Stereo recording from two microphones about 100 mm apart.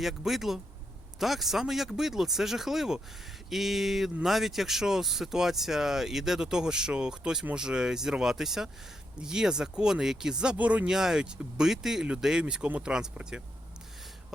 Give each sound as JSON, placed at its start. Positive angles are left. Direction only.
{"t": 0.0, "sound": "speech", "side_deg": -5}